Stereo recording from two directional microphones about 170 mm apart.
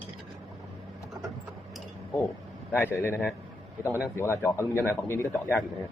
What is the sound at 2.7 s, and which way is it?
Speech, 15° left (ahead or behind).